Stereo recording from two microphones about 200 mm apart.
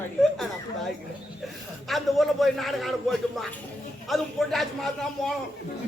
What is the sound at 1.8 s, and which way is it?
A man's voice, centre (ahead or behind).